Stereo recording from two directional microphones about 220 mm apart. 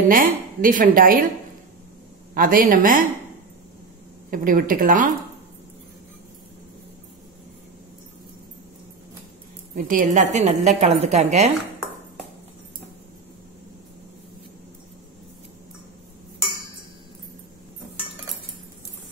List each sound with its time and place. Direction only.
0.1 s a woman's voice: 40° right (ahead or behind)
2.3 s a woman's voice: 40° right (ahead or behind)
4.3 s a woman's voice: 40° right (ahead or behind)
9.8 s a woman's voice: 35° right (ahead or behind)